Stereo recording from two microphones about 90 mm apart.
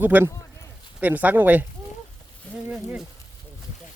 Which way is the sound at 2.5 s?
15° left (ahead or behind).